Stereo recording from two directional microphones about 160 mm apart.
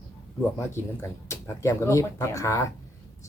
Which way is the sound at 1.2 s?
20° left (ahead or behind).